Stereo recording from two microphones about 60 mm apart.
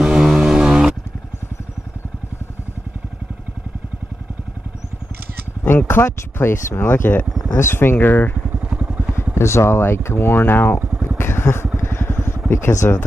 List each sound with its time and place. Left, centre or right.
0.0 s a sound: centre
5.7 s a sound: left
6.3 s speech: left
8.5 s vehicle: centre
9.3 s speech: left
11.1 s vehicle: left
12.4 s speech: left